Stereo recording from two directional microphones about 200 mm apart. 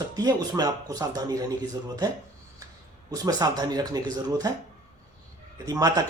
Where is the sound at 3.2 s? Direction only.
20° right (ahead or behind).